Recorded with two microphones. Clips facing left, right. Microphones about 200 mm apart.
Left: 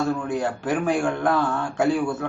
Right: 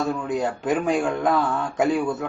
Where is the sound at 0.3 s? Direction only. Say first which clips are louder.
Right 1 dB; 20° right (ahead or behind).